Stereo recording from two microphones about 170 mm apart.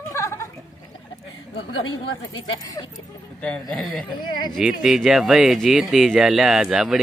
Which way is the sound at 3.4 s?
5° left (ahead or behind).